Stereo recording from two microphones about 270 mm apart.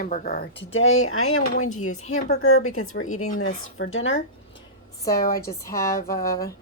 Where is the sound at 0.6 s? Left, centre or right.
Left.